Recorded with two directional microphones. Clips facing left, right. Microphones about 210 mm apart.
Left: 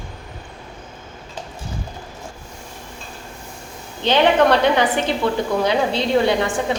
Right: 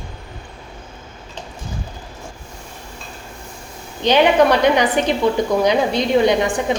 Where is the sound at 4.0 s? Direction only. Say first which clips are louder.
Right 2 dB; 15° right (ahead or behind).